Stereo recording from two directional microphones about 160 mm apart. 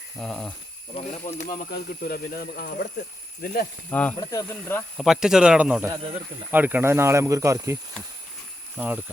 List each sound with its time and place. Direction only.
0.2 s a man's voice: 5° left (ahead or behind)
0.9 s speech: 40° left (ahead or behind)
1.7 s speech: 70° left (ahead or behind)
3.8 s speech: 10° left (ahead or behind)
4.2 s speech: 20° left (ahead or behind)
4.9 s a man's voice: 5° right (ahead or behind)
5.9 s speech: 35° right (ahead or behind)
6.5 s speech: 10° right (ahead or behind)
8.8 s speech: 10° right (ahead or behind)